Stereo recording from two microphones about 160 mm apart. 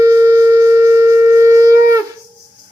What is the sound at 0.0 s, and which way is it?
Shofar, 20° right (ahead or behind).